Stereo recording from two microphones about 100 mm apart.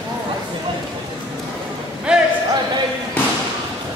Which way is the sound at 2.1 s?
10° right (ahead or behind).